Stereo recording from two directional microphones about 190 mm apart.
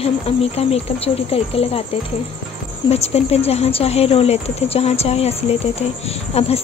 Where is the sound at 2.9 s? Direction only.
35° left (ahead or behind).